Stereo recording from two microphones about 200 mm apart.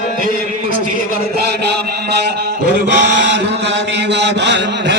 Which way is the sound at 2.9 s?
60° right (ahead or behind).